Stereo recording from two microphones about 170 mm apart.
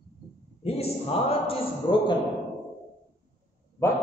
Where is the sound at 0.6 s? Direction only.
35° left (ahead or behind).